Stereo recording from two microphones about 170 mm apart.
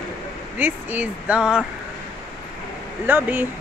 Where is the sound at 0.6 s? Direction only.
10° right (ahead or behind).